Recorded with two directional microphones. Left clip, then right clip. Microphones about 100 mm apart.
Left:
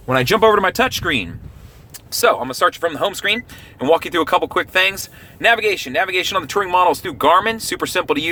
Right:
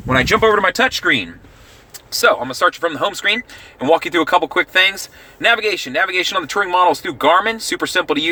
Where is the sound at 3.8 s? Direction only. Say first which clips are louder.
Right 1 dB; 20° left (ahead or behind).